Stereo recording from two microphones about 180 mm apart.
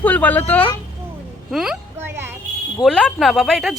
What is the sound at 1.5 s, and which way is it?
Speech, 5° right (ahead or behind).